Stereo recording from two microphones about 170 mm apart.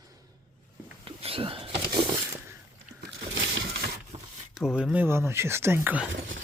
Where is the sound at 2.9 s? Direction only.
80° right.